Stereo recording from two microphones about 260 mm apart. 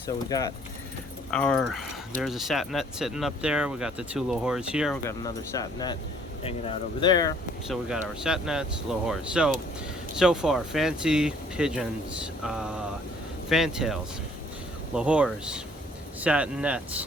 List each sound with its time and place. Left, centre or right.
0.3 s speech: centre
1.3 s speech: centre
5.0 s speech: centre
7.7 s speech: centre